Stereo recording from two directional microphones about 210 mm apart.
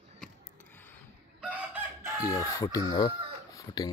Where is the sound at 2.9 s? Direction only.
20° left (ahead or behind).